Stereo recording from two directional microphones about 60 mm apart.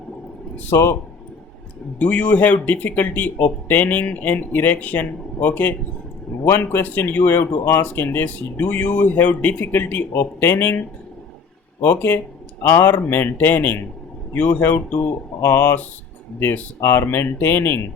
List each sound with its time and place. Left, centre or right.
0.7 s speech: left
2.0 s speech: left
10.1 s speech: left
10.5 s speech: left
11.8 s speech: left
15.4 s speech: left
16.8 s speech: left